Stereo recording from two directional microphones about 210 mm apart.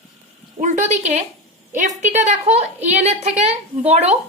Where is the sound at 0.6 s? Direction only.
35° right (ahead or behind).